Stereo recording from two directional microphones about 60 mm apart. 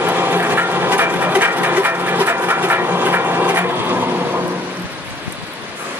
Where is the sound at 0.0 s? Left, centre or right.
Right.